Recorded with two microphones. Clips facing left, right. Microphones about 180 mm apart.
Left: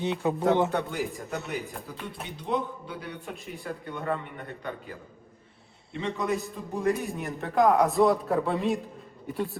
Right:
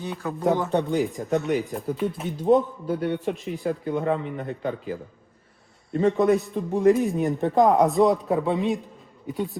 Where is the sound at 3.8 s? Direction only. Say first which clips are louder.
Right 10 dB; 40° right (ahead or behind).